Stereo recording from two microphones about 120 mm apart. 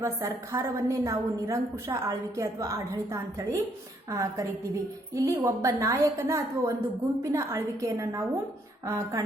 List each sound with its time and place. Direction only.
0.0 s a woman's voice: 25° right (ahead or behind)